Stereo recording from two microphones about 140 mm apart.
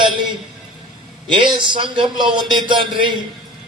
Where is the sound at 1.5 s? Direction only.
35° right (ahead or behind).